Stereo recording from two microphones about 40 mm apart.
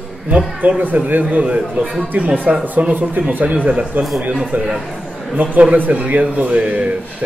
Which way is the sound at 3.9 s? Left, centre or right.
Right.